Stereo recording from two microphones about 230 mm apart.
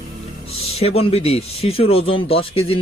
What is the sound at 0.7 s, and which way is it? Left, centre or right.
Speech, left.